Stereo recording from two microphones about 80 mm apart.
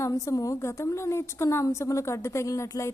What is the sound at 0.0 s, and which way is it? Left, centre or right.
A woman's voice, left.